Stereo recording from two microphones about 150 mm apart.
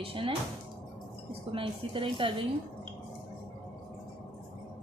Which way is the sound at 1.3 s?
35° right (ahead or behind).